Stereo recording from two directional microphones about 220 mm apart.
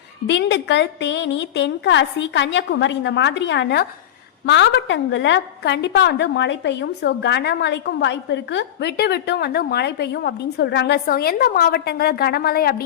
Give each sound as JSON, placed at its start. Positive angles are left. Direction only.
{"t": 0.3, "sound": "a woman's voice", "side_deg": 50}